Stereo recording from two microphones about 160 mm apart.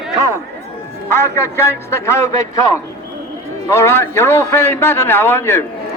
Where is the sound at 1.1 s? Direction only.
15° left (ahead or behind).